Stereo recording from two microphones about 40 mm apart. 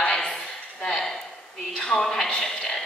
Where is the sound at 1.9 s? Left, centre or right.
Centre.